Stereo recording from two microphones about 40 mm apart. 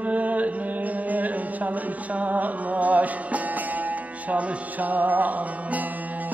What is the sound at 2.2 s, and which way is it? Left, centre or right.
Music, right.